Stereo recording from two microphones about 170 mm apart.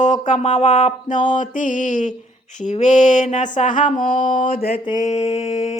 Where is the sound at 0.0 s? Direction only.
45° left (ahead or behind).